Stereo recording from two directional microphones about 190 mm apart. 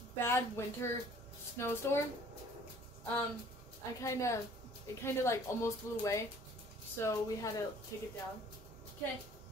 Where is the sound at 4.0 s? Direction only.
15° left (ahead or behind).